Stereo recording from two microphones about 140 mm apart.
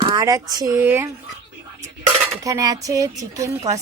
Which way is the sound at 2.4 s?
25° right (ahead or behind).